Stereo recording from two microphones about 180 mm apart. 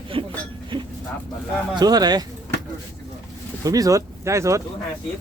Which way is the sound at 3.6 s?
20° right (ahead or behind).